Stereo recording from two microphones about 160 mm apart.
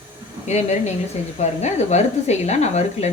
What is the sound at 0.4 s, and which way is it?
Speech, 45° left (ahead or behind).